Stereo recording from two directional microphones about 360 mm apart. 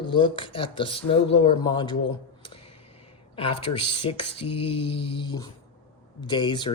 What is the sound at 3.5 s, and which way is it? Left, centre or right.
Speech, centre.